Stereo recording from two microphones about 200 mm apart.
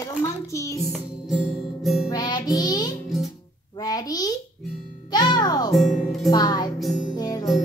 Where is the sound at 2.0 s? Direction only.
20° left (ahead or behind).